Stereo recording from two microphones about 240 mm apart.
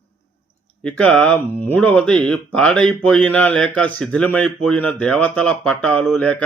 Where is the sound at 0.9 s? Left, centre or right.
Centre.